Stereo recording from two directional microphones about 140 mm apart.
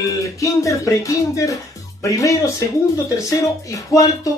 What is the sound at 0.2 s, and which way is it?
Speech, 20° left (ahead or behind).